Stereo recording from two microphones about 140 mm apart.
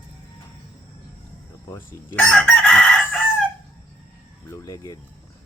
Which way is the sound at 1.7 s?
15° left (ahead or behind).